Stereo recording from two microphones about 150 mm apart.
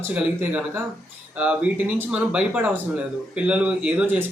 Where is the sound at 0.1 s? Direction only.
10° right (ahead or behind).